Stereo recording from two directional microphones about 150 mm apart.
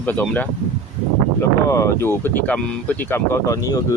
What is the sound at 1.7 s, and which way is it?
Speech, 20° left (ahead or behind).